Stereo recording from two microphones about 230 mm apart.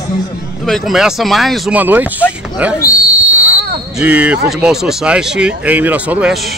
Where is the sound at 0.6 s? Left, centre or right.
Centre.